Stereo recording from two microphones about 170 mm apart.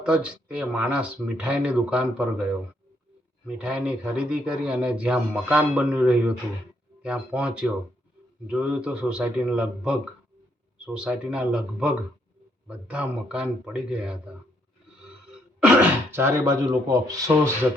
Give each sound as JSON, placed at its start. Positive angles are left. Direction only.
{"t": 0.0, "sound": "speech", "side_deg": -5}
{"t": 3.4, "sound": "a man's voice", "side_deg": -5}
{"t": 15.6, "sound": "speech", "side_deg": -10}